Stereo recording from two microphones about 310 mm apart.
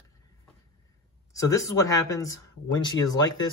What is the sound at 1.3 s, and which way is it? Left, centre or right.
Speech, centre.